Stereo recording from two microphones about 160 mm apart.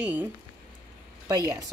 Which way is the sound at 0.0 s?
10° right (ahead or behind).